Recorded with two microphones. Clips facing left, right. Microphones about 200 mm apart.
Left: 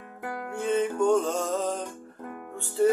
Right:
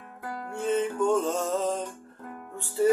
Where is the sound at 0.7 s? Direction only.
Centre (ahead or behind).